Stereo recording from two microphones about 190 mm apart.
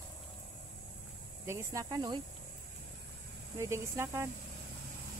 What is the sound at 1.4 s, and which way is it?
Speech, 15° right (ahead or behind).